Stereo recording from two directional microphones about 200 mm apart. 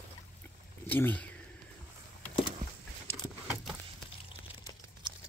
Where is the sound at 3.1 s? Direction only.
5° left (ahead or behind).